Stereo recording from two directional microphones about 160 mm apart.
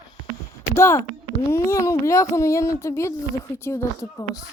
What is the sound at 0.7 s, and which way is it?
Speech, 15° left (ahead or behind).